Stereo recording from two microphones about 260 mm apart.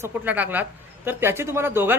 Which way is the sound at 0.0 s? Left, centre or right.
Centre.